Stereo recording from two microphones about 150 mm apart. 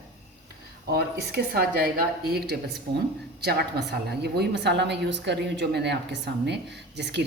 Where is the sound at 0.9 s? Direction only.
90° right.